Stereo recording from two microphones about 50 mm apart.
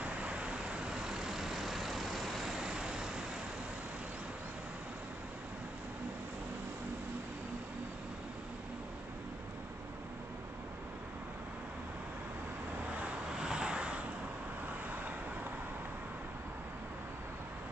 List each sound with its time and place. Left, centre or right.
0.0 s vehicle: right
13.4 s vehicle: centre